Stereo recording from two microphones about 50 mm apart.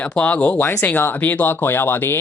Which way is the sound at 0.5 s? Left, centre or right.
Left.